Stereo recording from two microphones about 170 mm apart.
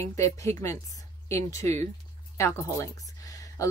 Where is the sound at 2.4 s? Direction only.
15° left (ahead or behind).